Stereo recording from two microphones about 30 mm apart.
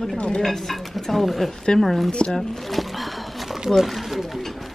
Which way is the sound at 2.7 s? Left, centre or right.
Centre.